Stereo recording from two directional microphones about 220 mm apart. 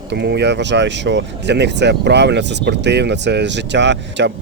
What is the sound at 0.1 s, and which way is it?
Speech, 50° right (ahead or behind).